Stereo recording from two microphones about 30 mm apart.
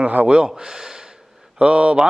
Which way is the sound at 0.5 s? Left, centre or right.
Centre.